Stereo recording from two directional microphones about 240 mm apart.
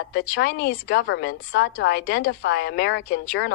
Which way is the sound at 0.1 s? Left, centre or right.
Left.